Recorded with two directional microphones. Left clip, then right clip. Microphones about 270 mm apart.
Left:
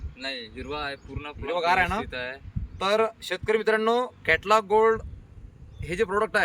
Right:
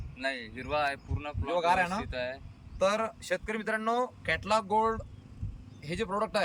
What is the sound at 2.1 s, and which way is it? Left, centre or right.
Speech, centre.